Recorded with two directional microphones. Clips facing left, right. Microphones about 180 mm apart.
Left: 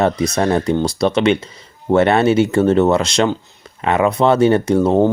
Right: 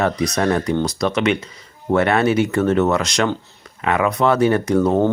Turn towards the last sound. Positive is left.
turn(degrees=25)  # may be behind; listen again after turning